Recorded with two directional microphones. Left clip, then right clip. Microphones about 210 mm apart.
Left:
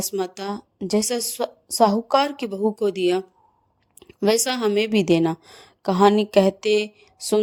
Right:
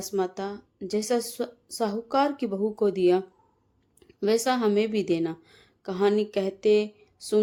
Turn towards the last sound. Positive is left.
turn(degrees=35)  # may be behind; listen again after turning